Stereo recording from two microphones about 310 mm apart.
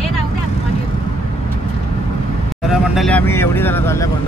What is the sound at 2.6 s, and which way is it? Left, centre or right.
Speech, centre.